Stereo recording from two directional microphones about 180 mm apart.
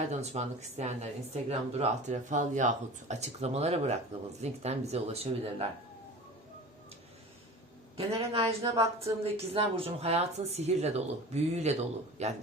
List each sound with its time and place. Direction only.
0.1 s speech: 35° right (ahead or behind)
7.9 s speech: 30° right (ahead or behind)